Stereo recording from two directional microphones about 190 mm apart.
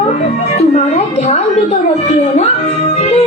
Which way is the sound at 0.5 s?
35° left (ahead or behind).